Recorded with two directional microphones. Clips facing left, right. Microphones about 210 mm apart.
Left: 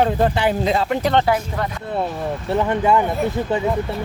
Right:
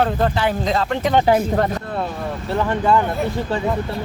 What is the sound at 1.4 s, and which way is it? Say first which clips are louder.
Speech: right 6 dB; 45° right (ahead or behind).